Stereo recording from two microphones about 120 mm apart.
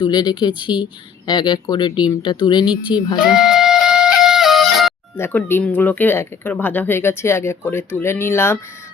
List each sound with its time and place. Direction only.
0.0 s speech: 35° left (ahead or behind)
3.2 s music: 5° right (ahead or behind)
5.1 s speech: 20° left (ahead or behind)